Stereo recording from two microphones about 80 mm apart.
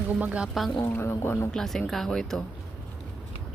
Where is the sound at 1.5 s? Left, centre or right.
Centre.